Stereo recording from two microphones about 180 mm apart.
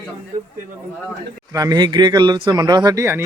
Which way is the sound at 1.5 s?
20° right (ahead or behind).